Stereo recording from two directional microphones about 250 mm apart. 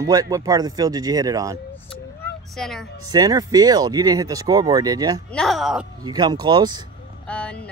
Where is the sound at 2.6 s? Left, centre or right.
Centre.